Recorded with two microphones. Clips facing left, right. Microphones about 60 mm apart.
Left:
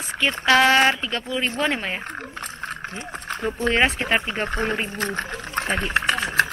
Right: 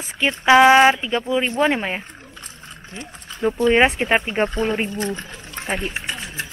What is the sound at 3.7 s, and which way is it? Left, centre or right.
Speech, centre.